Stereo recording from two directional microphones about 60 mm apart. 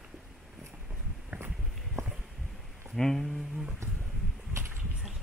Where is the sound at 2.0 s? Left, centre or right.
Right.